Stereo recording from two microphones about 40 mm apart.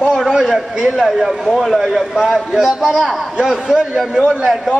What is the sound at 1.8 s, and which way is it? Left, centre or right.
A man's voice, centre.